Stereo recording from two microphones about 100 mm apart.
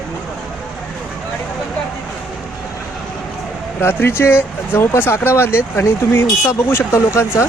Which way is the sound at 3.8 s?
25° left (ahead or behind).